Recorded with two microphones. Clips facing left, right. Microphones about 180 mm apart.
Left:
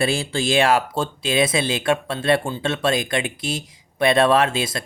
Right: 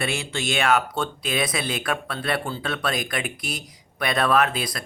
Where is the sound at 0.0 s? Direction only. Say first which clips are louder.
Left 6 dB; 30° left (ahead or behind).